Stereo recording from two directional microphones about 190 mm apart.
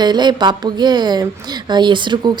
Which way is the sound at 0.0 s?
20° right (ahead or behind).